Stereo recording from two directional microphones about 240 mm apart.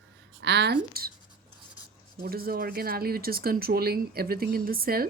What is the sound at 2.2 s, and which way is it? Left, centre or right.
Speech, right.